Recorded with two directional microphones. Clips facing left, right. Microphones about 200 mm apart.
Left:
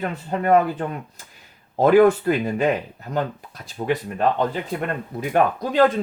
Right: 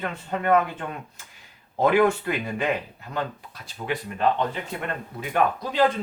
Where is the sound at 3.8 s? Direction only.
35° left (ahead or behind).